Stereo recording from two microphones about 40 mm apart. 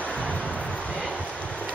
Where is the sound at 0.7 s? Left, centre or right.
Left.